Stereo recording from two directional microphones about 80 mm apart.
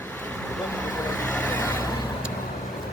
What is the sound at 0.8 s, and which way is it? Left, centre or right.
Vehicle, centre.